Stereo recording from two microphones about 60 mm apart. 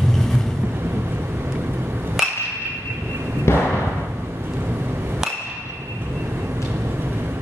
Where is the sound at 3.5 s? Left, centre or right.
Left.